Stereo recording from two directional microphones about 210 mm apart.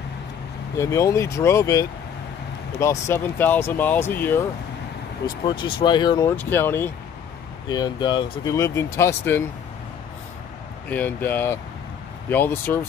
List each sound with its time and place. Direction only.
0.7 s speech: 15° left (ahead or behind)
5.2 s speech: 25° left (ahead or behind)
10.9 s speech: 10° left (ahead or behind)